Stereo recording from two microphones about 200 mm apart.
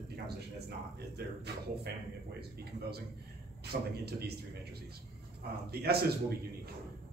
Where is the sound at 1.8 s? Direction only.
55° right (ahead or behind).